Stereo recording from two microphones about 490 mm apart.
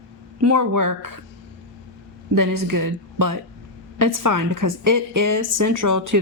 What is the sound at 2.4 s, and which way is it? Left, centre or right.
A woman's voice, right.